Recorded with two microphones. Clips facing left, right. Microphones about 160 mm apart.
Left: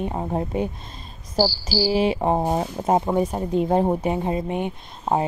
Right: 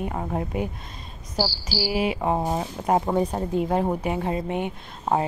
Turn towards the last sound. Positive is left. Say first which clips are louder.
# left 1 dB
turn(degrees=20)  # may be behind; listen again after turning